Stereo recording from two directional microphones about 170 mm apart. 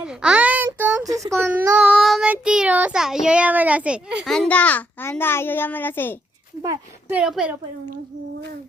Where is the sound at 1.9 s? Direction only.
Centre (ahead or behind).